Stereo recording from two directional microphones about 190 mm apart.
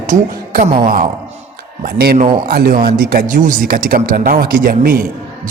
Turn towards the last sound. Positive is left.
turn(degrees=-50)  # may be behind; listen again after turning